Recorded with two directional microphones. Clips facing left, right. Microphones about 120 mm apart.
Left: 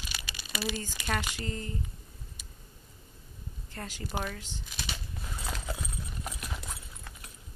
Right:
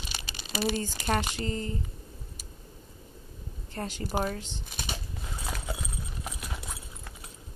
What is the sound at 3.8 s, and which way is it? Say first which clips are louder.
Speech: right 5 dB; 25° right (ahead or behind).